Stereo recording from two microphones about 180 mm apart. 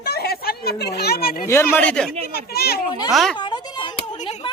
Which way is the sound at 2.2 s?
60° left (ahead or behind).